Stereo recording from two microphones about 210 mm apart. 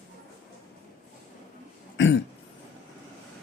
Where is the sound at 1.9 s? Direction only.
60° left (ahead or behind).